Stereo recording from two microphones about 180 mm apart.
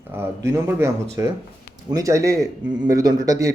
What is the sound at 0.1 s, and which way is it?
A man's voice, 15° right (ahead or behind).